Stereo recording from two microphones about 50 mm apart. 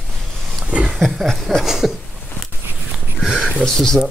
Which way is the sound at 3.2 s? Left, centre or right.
Centre.